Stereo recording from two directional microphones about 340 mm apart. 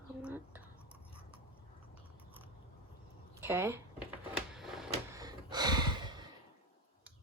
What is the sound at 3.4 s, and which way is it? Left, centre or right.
Speech, centre.